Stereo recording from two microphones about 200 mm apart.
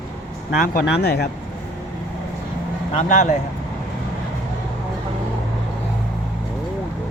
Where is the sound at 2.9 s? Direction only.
40° left (ahead or behind).